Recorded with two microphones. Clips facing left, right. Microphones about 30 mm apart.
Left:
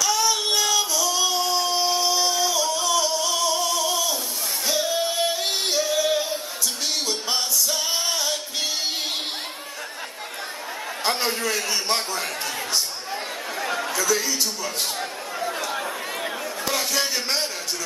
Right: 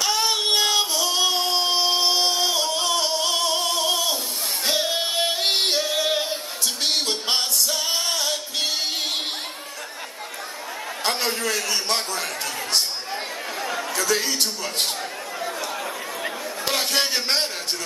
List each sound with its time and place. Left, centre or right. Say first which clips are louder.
0.0 s music: even; right
4.6 s singing: even; right
11.1 s a sound: even; right
11.7 s a man's voice: even; right
13.6 s chatter: left 2 dB; centre
13.9 s a man's voice: right 2 dB; right
16.6 s a sound: right 2 dB; right